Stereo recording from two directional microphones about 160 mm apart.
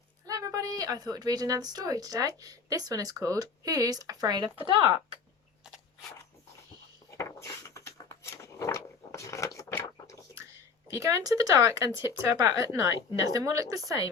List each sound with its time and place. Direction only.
0.3 s a woman's voice: 20° right (ahead or behind)
7.1 s a sound: 20° left (ahead or behind)
10.9 s a woman's voice: 20° right (ahead or behind)